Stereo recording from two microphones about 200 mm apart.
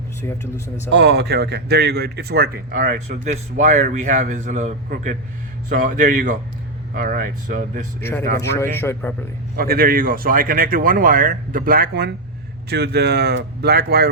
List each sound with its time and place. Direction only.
0.2 s a man's voice: 15° left (ahead or behind)
0.9 s a man's voice: 55° right (ahead or behind)
3.2 s a man's voice: 35° right (ahead or behind)
8.4 s a man's voice: 15° left (ahead or behind)
9.6 s a man's voice: 45° right (ahead or behind)